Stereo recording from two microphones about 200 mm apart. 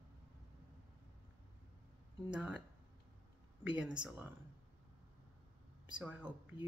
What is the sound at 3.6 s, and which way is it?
Speech, 5° right (ahead or behind).